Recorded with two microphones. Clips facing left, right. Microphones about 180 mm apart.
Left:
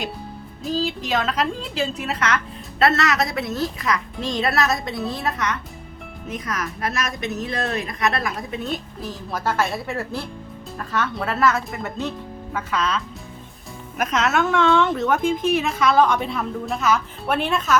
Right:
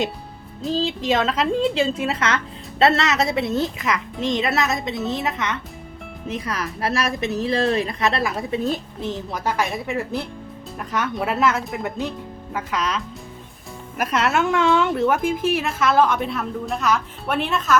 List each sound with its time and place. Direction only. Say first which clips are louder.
0.6 s a woman's voice: right 2 dB; 25° right (ahead or behind)
14.0 s a woman's voice: even; 10° right (ahead or behind)